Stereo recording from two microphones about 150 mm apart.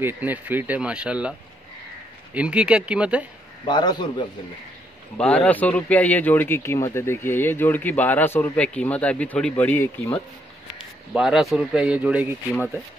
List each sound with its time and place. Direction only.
0.0 s speech: 10° right (ahead or behind)
2.3 s speech: 10° right (ahead or behind)
3.6 s a man's voice: 30° left (ahead or behind)
5.1 s speech: 10° left (ahead or behind)
11.1 s speech: centre (ahead or behind)
12.5 s speech: 5° left (ahead or behind)